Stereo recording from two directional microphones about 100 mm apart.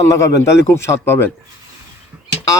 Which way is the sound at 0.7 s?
25° left (ahead or behind).